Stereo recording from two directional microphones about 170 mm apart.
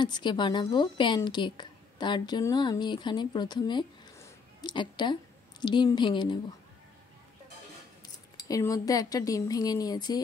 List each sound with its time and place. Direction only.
0.0 s a woman's voice: 25° left (ahead or behind)
8.5 s speech: 20° left (ahead or behind)